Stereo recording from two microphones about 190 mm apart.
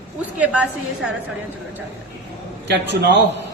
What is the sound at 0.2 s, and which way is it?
Speech, 5° right (ahead or behind).